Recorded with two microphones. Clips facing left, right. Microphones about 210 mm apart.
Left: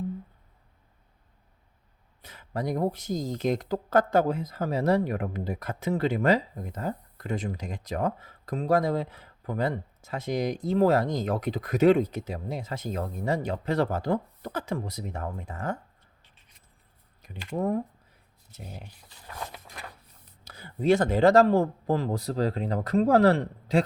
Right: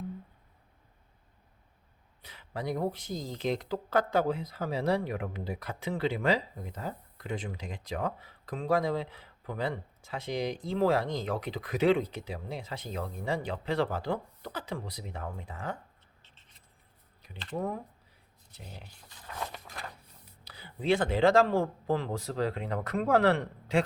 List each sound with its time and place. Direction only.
2.2 s speech: 45° left (ahead or behind)
16.2 s writing: 10° left (ahead or behind)
17.3 s speech: 10° left (ahead or behind)
18.5 s speech: 45° left (ahead or behind)
20.4 s speech: 45° left (ahead or behind)